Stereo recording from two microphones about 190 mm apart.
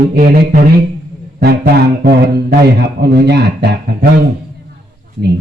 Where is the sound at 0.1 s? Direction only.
50° right (ahead or behind).